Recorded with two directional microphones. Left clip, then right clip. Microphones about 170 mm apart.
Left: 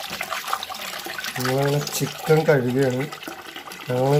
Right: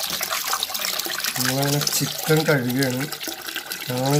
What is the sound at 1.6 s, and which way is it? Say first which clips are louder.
Speech: right 1 dB; 10° right (ahead or behind).